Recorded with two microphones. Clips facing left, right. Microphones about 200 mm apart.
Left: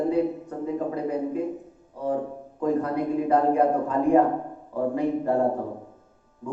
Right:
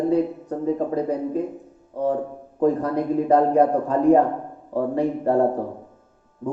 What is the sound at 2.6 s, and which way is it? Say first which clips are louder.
A man's voice: right 4 dB; 35° right (ahead or behind).